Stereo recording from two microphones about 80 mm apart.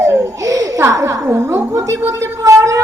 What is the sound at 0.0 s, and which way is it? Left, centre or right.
Baby laughter, right.